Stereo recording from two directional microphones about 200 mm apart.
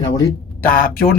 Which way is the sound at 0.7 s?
45° left (ahead or behind).